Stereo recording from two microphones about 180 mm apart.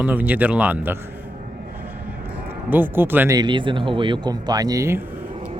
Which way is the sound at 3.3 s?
25° right (ahead or behind).